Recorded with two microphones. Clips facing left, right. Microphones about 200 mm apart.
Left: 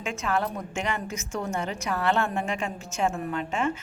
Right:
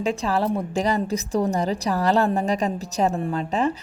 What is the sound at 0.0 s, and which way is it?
A woman's voice, 35° right (ahead or behind).